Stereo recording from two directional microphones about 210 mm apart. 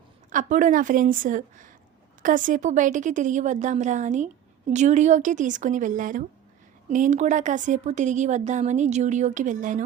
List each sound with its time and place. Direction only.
0.3 s speech: 40° right (ahead or behind)